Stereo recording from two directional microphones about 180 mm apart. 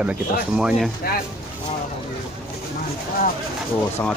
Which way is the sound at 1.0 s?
55° left (ahead or behind).